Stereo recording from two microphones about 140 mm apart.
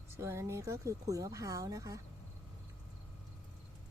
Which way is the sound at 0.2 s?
20° right (ahead or behind).